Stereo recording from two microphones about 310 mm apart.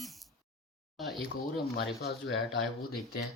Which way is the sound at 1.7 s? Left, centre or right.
Left.